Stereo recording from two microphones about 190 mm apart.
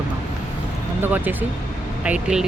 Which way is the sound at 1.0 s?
10° right (ahead or behind).